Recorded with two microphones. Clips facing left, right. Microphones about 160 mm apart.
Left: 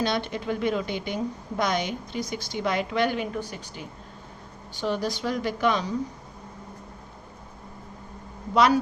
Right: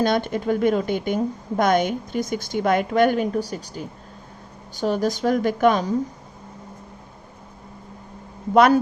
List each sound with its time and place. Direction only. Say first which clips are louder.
0.0 s a woman's voice: right 6 dB; 50° right (ahead or behind)
8.5 s a woman's voice: right 5 dB; 55° right (ahead or behind)